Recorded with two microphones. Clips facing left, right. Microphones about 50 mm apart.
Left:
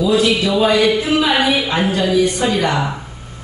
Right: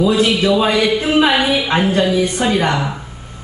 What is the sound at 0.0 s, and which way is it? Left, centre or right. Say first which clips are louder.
Speech: right 1 dB; right.